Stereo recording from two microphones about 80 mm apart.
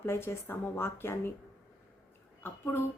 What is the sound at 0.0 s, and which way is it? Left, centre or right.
A woman's voice, left.